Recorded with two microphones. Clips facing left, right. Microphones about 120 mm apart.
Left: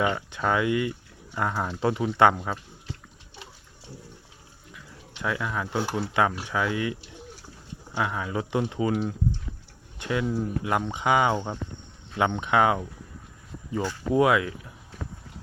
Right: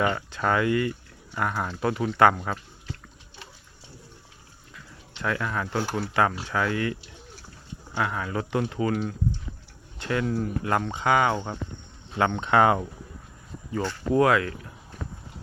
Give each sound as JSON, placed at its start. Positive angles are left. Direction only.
{"t": 0.3, "sound": "speech", "side_deg": 15}
{"t": 4.7, "sound": "a sound", "side_deg": 10}
{"t": 5.9, "sound": "speech", "side_deg": 10}
{"t": 13.7, "sound": "speech", "side_deg": 15}